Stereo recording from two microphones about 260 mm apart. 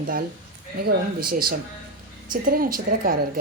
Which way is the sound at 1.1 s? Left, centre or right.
Right.